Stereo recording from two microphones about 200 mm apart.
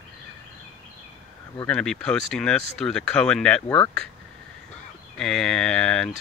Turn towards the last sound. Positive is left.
turn(degrees=5)  # may be behind; listen again after turning